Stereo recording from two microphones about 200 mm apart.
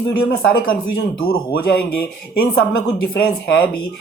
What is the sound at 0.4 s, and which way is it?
Speech, 50° left (ahead or behind).